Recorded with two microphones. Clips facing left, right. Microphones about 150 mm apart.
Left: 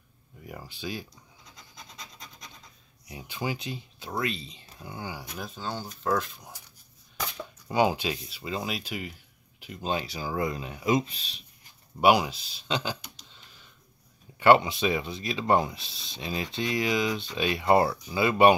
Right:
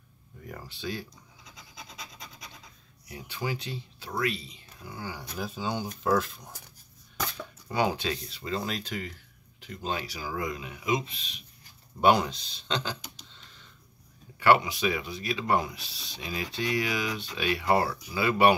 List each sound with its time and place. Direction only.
0.5 s speech: 15° left (ahead or behind)
2.0 s rub: 5° right (ahead or behind)
3.1 s speech: 15° left (ahead or behind)
5.4 s speech: 10° right (ahead or behind)
6.0 s speech: 5° right (ahead or behind)
7.3 s speech: 15° left (ahead or behind); by 11.4 s 35° left (ahead or behind)
12.0 s speech: 5° left (ahead or behind)
14.4 s speech: 25° left (ahead or behind)